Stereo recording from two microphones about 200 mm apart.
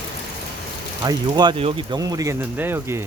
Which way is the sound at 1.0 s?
20° right (ahead or behind).